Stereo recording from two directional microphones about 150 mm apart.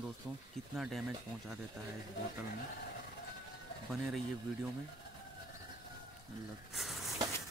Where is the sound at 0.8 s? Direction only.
Centre (ahead or behind).